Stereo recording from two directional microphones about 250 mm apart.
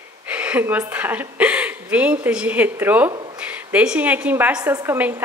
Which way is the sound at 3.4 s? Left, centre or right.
Centre.